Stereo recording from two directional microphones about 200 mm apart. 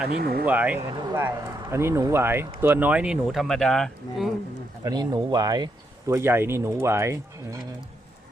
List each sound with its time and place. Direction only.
0.2 s speech: 50° right (ahead or behind)
0.4 s speech: 5° right (ahead or behind)
4.8 s speech: 20° right (ahead or behind)